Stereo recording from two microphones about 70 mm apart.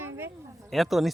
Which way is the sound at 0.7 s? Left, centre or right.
Centre.